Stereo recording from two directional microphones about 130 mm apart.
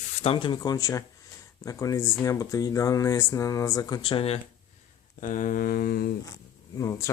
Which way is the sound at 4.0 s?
45° left (ahead or behind).